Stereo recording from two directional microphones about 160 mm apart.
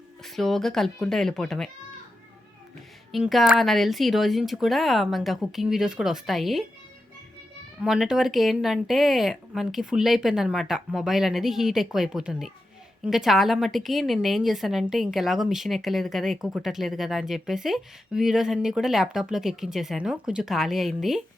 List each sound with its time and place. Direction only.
0.2 s a woman's voice: centre (ahead or behind)
3.1 s a woman's voice: centre (ahead or behind)
7.8 s a woman's voice: 5° right (ahead or behind)